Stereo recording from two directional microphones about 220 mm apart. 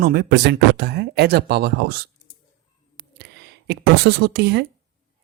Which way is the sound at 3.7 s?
45° right (ahead or behind).